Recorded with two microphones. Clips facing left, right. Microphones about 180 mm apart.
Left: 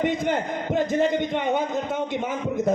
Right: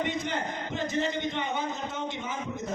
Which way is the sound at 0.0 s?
50° left (ahead or behind).